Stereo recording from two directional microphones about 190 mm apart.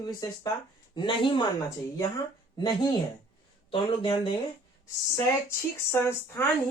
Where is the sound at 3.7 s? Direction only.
25° left (ahead or behind).